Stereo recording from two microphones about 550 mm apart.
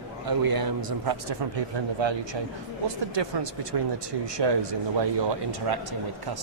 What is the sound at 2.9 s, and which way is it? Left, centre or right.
Speech, right.